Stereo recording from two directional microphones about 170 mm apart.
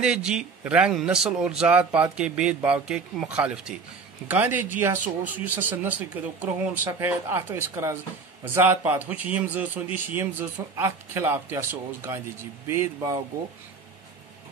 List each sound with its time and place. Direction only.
0.0 s a man's voice: 5° right (ahead or behind)